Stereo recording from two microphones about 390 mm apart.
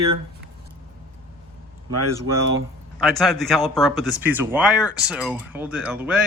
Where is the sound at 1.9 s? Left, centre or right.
Right.